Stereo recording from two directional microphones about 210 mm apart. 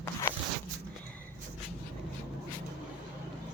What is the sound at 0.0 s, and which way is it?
Zipper, 15° left (ahead or behind).